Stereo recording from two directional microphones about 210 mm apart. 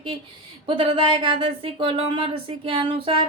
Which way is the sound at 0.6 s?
25° right (ahead or behind).